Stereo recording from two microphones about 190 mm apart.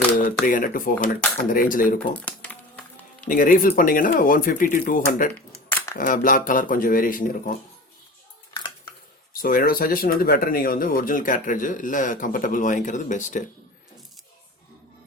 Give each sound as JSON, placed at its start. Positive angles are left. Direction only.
{"t": 0.4, "sound": "speech", "side_deg": 45}
{"t": 2.1, "sound": "typing", "side_deg": 10}
{"t": 3.2, "sound": "speech", "side_deg": 45}
{"t": 8.5, "sound": "dishes", "side_deg": 20}
{"t": 9.4, "sound": "speech", "side_deg": 50}